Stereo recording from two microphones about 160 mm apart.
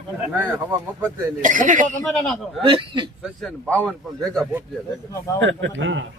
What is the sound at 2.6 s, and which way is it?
Speech, 30° right (ahead or behind).